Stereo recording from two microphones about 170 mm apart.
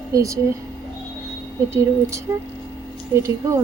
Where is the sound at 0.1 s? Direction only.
20° right (ahead or behind).